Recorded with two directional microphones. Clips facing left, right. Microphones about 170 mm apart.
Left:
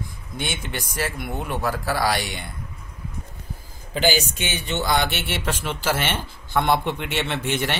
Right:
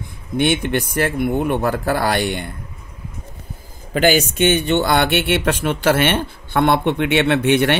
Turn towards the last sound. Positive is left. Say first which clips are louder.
# right 10 dB
turn(degrees=-65)  # may be behind; listen again after turning